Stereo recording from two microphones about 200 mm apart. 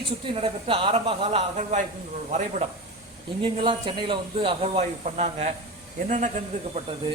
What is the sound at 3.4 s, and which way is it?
Speech, 25° right (ahead or behind).